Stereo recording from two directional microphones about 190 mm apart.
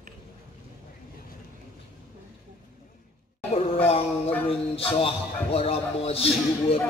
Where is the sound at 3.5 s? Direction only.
30° left (ahead or behind).